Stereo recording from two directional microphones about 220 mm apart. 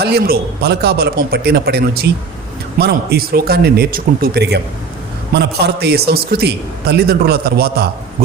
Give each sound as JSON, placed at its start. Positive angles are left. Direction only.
{"t": 0.0, "sound": "a man's voice", "side_deg": -45}